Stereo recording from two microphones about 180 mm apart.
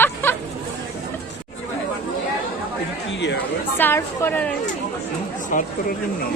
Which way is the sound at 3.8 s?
10° left (ahead or behind).